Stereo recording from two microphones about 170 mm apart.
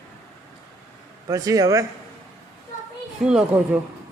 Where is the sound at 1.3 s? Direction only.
20° right (ahead or behind).